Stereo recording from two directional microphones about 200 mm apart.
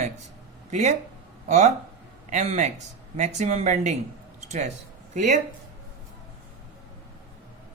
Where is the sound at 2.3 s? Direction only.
35° right (ahead or behind).